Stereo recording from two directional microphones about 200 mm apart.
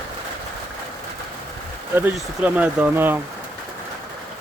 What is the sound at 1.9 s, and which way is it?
Speech, 10° right (ahead or behind).